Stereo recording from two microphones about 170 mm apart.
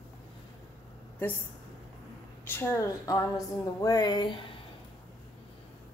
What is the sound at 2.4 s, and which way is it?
A woman's voice, 10° left (ahead or behind).